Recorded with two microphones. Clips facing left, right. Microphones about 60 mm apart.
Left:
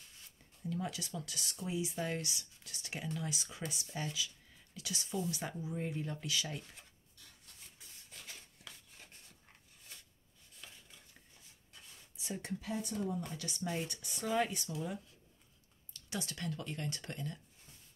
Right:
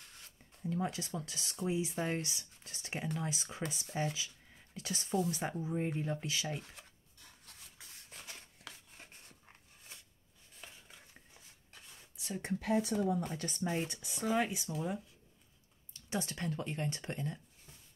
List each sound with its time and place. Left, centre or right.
0.7 s speech: right
10.6 s chopping: right
12.5 s speech: right
13.2 s speech: right
13.6 s speech: right